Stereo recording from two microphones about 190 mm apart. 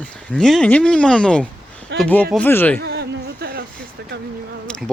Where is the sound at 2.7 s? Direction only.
60° right (ahead or behind).